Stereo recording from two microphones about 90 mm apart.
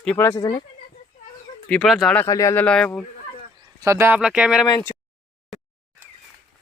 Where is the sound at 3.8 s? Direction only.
30° right (ahead or behind).